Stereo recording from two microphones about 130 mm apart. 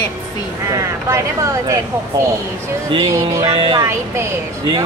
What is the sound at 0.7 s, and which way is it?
Speech, 25° right (ahead or behind).